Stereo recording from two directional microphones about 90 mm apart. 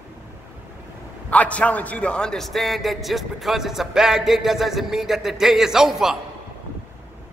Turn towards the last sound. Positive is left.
turn(degrees=-5)  # may be behind; listen again after turning